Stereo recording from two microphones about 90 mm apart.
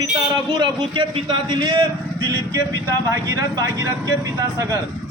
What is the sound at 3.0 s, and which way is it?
Speech, 35° right (ahead or behind).